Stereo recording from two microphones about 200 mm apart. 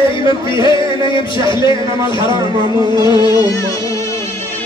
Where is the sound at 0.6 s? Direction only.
25° left (ahead or behind).